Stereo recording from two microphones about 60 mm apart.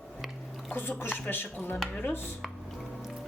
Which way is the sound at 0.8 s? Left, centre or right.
Left.